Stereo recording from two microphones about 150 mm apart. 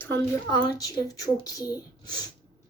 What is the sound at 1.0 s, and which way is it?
Speech, 25° left (ahead or behind).